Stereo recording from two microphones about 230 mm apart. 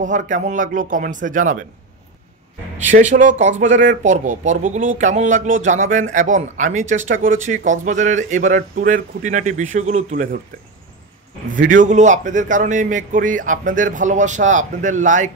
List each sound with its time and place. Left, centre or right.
0.0 s speech: right
2.9 s speech: right
11.5 s speech: right